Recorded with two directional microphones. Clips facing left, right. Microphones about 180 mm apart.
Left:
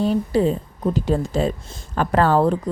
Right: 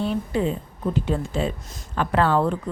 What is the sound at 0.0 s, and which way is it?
A woman's voice, 40° left (ahead or behind).